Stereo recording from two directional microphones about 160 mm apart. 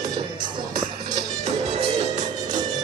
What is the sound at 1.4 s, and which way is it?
Music, 45° right (ahead or behind).